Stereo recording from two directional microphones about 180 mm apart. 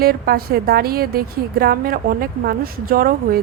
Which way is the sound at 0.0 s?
55° right (ahead or behind).